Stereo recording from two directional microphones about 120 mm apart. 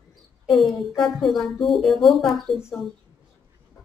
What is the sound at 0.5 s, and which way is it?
A woman's voice, centre (ahead or behind).